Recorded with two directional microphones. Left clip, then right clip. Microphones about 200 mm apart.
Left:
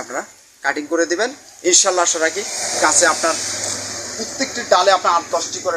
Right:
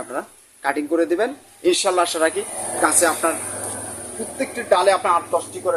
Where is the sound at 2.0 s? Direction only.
25° right (ahead or behind).